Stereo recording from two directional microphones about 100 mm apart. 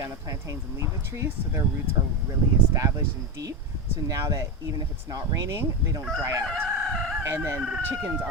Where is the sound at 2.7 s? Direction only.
30° right (ahead or behind).